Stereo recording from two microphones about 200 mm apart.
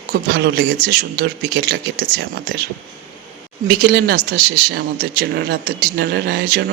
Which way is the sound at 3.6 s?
50° right (ahead or behind).